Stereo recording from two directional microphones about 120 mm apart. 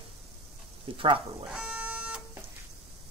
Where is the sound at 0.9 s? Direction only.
45° right (ahead or behind).